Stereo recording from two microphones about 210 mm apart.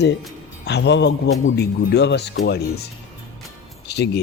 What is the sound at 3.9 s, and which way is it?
Speech, 50° left (ahead or behind).